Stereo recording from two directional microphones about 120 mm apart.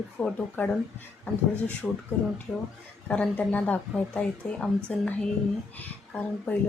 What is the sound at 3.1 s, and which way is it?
Speech, 10° left (ahead or behind).